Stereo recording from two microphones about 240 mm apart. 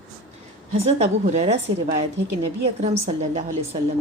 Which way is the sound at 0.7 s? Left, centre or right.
Right.